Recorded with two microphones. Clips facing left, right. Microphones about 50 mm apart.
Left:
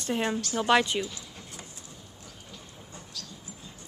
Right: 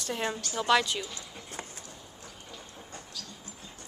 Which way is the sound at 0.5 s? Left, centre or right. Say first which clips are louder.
Left 2 dB; left.